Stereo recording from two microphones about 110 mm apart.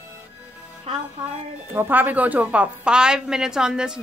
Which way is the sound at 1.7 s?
20° right (ahead or behind).